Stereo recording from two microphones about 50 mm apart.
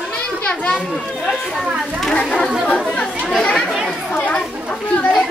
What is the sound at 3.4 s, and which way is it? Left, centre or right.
Chatter, left.